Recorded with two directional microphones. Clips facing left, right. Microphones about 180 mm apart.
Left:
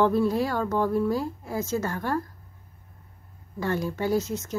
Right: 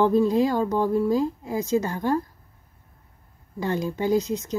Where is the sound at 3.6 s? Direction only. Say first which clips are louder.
Right 2 dB; 15° right (ahead or behind).